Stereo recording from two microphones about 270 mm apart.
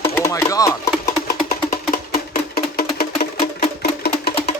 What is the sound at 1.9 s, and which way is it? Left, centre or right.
Music, left.